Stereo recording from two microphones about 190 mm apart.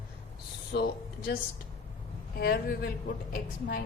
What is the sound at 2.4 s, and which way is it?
A man's voice, 55° left (ahead or behind).